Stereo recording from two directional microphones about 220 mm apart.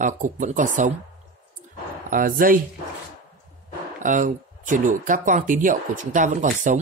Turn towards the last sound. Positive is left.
turn(degrees=-35)  # may be behind; listen again after turning